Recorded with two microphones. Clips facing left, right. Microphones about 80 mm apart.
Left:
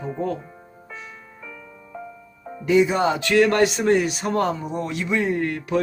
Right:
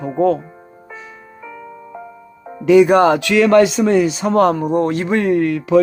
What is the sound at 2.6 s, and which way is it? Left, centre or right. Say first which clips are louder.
Music: right 8 dB; right.